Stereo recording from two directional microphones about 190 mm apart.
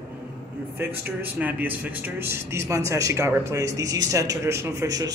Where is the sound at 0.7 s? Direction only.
10° right (ahead or behind).